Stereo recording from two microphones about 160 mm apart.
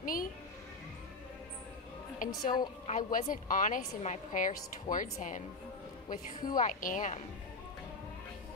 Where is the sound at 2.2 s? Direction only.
55° left (ahead or behind).